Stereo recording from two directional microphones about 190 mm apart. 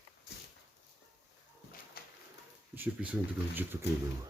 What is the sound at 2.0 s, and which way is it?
Pigeon, 55° left (ahead or behind).